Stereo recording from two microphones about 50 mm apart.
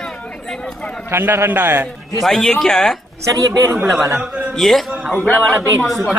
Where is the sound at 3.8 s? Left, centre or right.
Centre.